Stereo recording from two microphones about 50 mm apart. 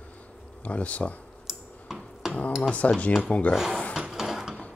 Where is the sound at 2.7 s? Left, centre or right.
Left.